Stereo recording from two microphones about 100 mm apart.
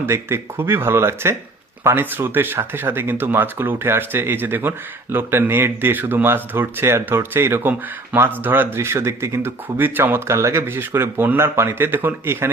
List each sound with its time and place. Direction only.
0.0 s speech: 25° right (ahead or behind)